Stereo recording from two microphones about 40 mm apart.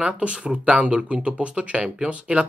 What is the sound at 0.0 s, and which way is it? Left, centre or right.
Speech, right.